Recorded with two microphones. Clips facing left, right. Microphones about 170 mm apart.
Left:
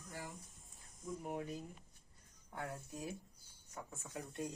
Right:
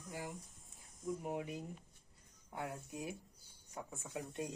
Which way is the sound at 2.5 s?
10° right (ahead or behind).